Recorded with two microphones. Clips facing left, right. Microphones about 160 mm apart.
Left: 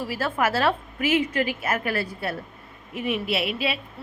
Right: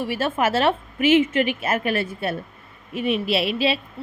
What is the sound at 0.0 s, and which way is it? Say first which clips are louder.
A woman's voice: right 3 dB; 25° right (ahead or behind).